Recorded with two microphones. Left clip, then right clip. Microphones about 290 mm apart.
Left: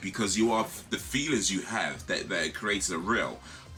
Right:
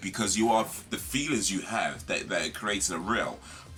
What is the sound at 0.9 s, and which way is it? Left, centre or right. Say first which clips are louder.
Speech: left 1 dB; centre.